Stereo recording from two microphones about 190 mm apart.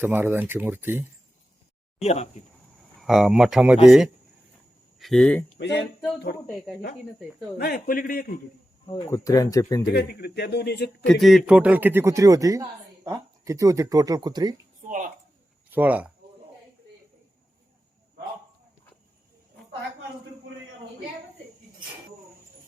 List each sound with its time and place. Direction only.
0.0 s speech: 10° right (ahead or behind)
3.0 s speech: centre (ahead or behind)
5.5 s speech: 65° left (ahead or behind)
6.3 s speech: 55° left (ahead or behind)
7.6 s a man's voice: 50° left (ahead or behind)
8.9 s speech: 20° left (ahead or behind)
9.9 s speech: 60° left (ahead or behind)
11.0 s speech: centre (ahead or behind); by 14.5 s 20° right (ahead or behind)
15.7 s speech: 10° right (ahead or behind)